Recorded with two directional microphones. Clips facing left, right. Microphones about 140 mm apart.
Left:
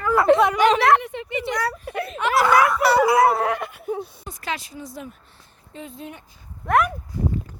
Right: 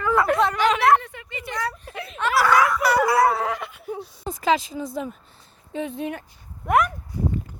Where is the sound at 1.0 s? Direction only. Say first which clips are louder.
Left 9 dB; 20° left (ahead or behind).